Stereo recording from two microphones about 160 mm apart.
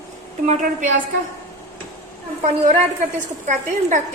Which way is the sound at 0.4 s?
55° right (ahead or behind).